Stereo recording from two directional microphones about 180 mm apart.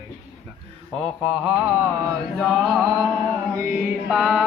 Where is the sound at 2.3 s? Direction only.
Centre (ahead or behind).